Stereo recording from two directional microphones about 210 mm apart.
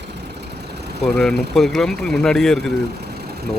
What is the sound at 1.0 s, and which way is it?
Speech, centre (ahead or behind).